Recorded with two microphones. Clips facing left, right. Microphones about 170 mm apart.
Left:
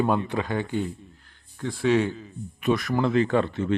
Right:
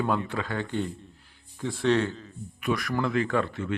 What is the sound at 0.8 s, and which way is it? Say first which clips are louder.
Speech: left 2 dB; 5° right (ahead or behind).